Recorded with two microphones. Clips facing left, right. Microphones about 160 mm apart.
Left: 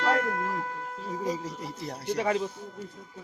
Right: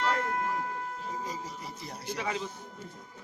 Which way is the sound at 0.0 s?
85° left.